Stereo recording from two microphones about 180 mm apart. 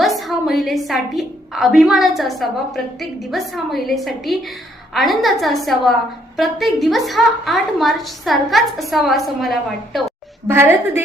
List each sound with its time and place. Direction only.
0.0 s a woman's voice: centre (ahead or behind)
10.5 s a woman's voice: 10° right (ahead or behind)